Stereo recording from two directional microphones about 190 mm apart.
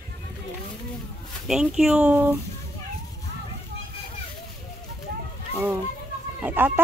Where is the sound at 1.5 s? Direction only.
5° right (ahead or behind).